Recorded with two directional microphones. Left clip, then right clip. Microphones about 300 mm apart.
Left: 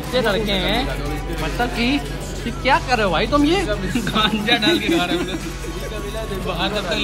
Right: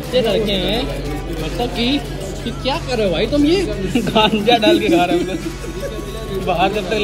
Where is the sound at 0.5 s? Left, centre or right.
Centre.